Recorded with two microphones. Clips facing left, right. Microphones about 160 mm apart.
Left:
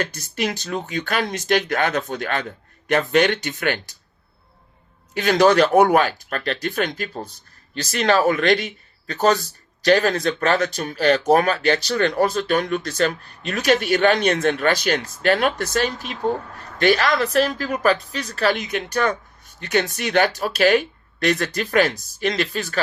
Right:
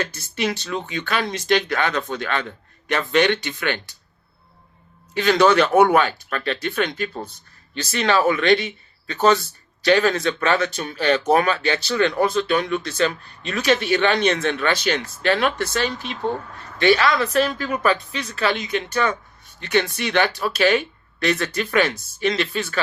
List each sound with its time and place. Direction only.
0.3 s speech: 45° left (ahead or behind)
5.1 s speech: 45° left (ahead or behind)